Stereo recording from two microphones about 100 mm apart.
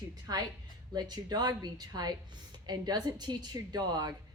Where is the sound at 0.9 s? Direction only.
45° right (ahead or behind).